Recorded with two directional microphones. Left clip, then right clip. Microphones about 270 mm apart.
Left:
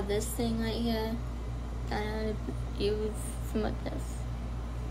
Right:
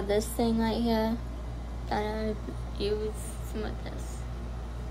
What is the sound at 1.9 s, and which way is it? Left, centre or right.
A woman's voice, centre.